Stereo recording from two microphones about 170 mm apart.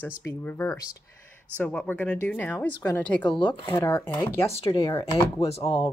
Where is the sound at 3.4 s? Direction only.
30° left (ahead or behind).